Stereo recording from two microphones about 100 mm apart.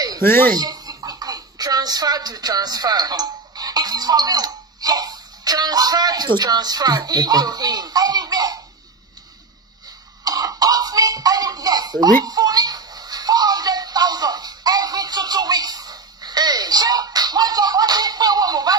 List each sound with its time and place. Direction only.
0.2 s speech: 20° left (ahead or behind)
0.6 s speech: 40° right (ahead or behind)
10.2 s cough: 40° right (ahead or behind)